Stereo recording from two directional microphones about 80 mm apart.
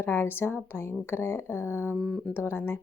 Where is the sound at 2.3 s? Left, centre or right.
Left.